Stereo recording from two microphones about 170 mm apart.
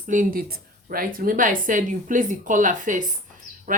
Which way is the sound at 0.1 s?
50° right (ahead or behind).